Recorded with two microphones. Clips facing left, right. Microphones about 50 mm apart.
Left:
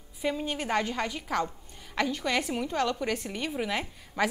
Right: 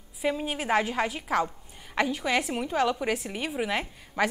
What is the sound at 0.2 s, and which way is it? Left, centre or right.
A woman's voice, centre.